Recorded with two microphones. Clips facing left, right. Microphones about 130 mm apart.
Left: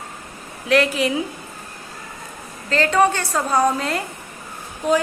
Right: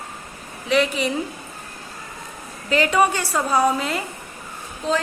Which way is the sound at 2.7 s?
10° right (ahead or behind).